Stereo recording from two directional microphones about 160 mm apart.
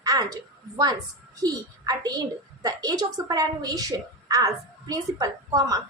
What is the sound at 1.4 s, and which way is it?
A woman's voice, 25° right (ahead or behind).